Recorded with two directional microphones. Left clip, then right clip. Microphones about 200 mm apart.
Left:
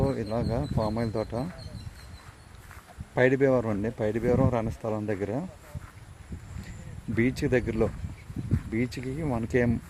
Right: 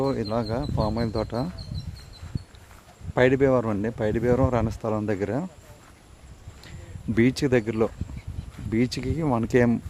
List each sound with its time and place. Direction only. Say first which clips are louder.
0.0 s speech: right 3 dB; 15° right (ahead or behind)
0.5 s speech: right 2 dB; centre (ahead or behind)
3.2 s speech: right 3 dB; 10° right (ahead or behind)
7.2 s speech: right 4 dB; 20° right (ahead or behind)
8.7 s speech: right 6 dB; 20° right (ahead or behind)